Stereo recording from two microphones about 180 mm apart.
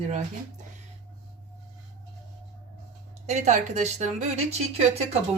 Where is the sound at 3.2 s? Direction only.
40° right (ahead or behind).